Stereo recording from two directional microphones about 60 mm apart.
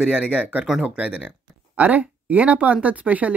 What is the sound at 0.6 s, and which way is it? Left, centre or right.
Speech, centre.